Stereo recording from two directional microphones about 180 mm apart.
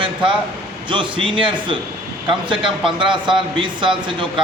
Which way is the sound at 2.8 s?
25° right (ahead or behind).